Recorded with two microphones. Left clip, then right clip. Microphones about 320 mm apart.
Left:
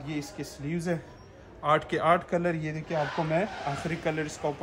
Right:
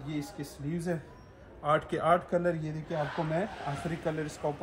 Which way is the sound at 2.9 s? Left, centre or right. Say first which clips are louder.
Left 4 dB; centre.